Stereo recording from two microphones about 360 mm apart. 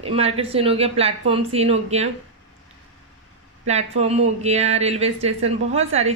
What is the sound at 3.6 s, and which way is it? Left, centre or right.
Speech, centre.